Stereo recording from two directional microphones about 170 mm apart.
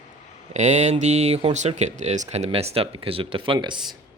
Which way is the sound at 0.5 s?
40° right (ahead or behind).